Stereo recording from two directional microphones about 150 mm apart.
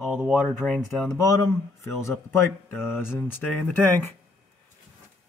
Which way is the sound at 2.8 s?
15° left (ahead or behind).